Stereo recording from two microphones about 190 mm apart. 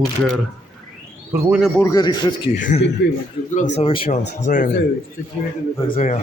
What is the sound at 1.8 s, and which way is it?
Speech, 20° left (ahead or behind).